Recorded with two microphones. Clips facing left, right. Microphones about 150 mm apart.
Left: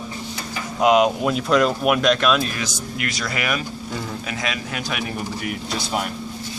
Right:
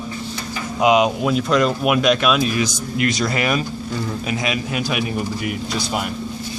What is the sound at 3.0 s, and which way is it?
Speech, 25° right (ahead or behind).